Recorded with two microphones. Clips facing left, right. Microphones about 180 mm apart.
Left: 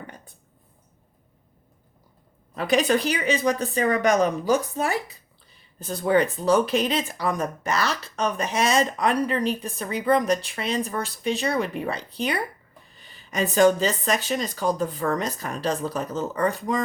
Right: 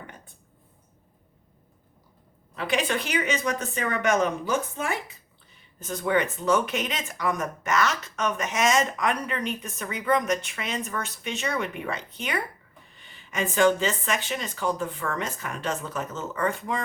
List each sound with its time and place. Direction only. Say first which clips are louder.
2.6 s speech: left 6 dB; 40° left (ahead or behind)